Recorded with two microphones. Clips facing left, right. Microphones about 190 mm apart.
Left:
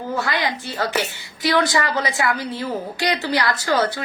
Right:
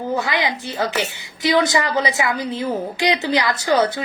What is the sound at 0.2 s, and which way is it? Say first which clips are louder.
A woman's voice: right 1 dB; 20° right (ahead or behind).